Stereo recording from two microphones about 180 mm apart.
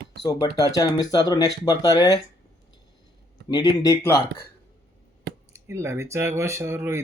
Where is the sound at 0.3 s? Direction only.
20° left (ahead or behind).